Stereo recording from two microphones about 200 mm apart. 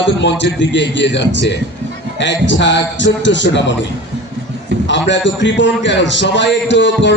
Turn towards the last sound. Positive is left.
turn(degrees=65)  # may be behind; listen again after turning